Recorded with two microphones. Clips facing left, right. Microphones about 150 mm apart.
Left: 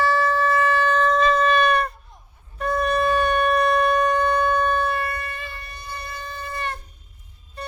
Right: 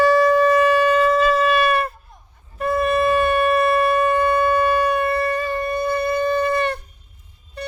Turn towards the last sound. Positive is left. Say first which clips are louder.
# right 12 dB
turn(degrees=-65)  # may be behind; listen again after turning